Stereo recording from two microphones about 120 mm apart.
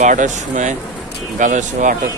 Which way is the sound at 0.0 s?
90° right.